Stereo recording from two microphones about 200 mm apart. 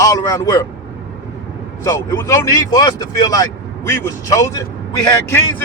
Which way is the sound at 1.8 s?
20° left (ahead or behind).